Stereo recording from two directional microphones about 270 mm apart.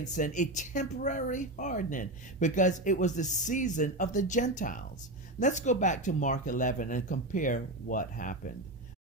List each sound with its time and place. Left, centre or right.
0.0 s a woman's voice: left